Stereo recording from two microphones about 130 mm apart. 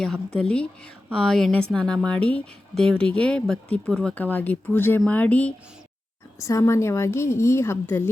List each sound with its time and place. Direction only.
0.0 s speech: 5° left (ahead or behind)
6.4 s a woman's voice: 25° left (ahead or behind)